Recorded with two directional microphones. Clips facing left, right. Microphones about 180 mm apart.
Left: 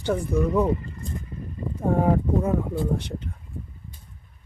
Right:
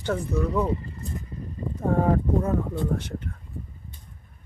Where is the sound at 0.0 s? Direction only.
10° left (ahead or behind).